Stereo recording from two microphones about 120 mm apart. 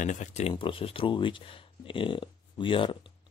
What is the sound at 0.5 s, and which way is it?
Speech, 45° left (ahead or behind).